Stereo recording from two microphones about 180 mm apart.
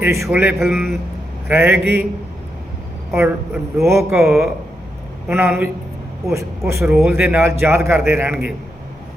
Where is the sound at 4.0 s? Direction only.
Centre (ahead or behind).